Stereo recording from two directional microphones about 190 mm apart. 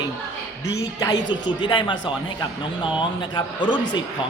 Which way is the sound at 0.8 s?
20° left (ahead or behind).